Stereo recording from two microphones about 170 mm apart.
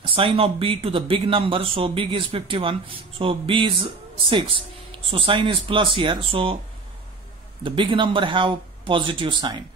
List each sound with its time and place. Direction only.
0.0 s speech: 30° right (ahead or behind)
7.6 s speech: 30° right (ahead or behind)